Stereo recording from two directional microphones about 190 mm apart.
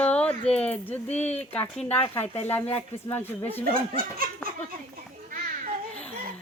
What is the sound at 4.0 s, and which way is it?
Laughter, 50° right (ahead or behind).